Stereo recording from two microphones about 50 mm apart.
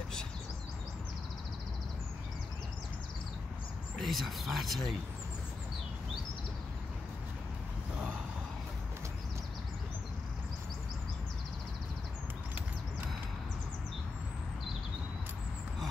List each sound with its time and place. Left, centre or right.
4.0 s speech: centre